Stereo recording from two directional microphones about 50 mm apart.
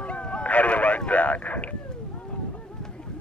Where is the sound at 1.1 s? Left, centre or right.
Left.